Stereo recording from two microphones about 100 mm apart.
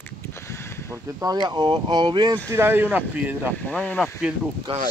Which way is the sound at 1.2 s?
40° right (ahead or behind).